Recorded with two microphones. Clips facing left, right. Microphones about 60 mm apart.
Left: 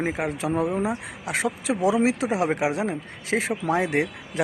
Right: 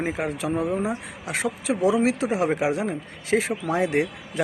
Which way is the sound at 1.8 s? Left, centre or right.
Centre.